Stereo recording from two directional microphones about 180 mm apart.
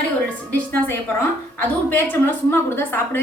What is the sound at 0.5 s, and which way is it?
A woman's voice, 10° left (ahead or behind).